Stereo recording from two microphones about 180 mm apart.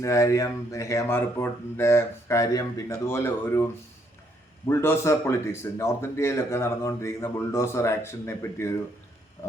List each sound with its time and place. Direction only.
0.0 s a man's voice: 15° left (ahead or behind)
4.7 s a man's voice: 15° left (ahead or behind)